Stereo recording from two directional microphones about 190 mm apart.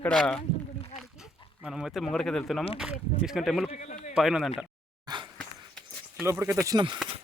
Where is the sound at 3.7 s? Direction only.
40° left (ahead or behind).